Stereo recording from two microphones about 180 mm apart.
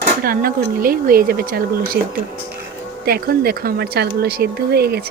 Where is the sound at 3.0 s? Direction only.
55° right (ahead or behind).